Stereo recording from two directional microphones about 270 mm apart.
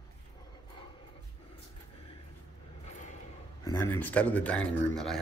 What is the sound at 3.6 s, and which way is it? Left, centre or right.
Speech, centre.